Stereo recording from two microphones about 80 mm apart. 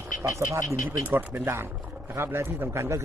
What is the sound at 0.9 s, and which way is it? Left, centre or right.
A man's voice, right.